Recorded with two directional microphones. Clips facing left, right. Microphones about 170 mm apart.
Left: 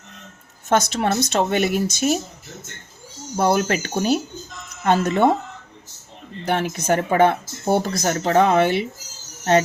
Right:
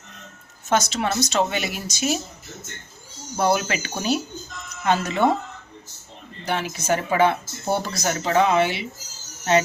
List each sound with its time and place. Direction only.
0.7 s speech: 55° left (ahead or behind)
3.3 s speech: 45° left (ahead or behind)
6.4 s speech: 55° left (ahead or behind)